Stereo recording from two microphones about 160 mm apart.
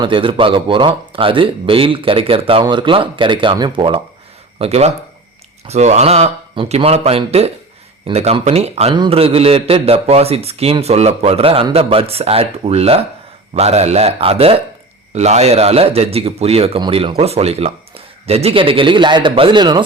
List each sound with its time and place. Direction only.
0.0 s a man's voice: 35° right (ahead or behind)